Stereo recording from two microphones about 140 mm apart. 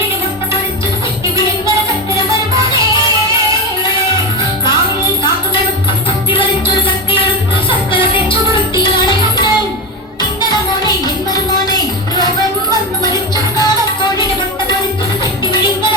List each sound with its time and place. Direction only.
8.8 s music: 30° left (ahead or behind)
10.5 s music: 30° left (ahead or behind)
13.3 s music: 30° left (ahead or behind)